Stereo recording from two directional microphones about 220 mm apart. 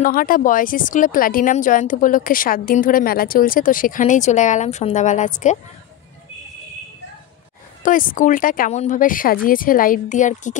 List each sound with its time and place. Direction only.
0.0 s speech: 40° left (ahead or behind)
7.8 s speech: 40° left (ahead or behind)